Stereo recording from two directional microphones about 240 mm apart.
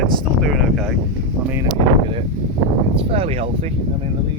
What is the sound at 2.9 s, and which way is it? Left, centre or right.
Speech, right.